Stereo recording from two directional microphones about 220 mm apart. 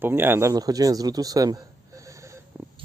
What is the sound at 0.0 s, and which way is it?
A man's voice, 10° right (ahead or behind).